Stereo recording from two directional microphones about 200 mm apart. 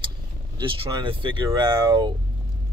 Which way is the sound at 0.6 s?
25° right (ahead or behind).